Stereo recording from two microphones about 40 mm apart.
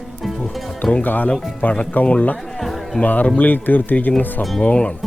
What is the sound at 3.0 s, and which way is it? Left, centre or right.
A man's voice, left.